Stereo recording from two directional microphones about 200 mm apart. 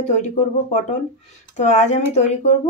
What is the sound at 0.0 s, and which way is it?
Speech, 35° left (ahead or behind).